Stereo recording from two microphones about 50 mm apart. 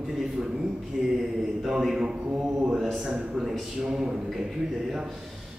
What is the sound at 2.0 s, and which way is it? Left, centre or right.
Mantra, right.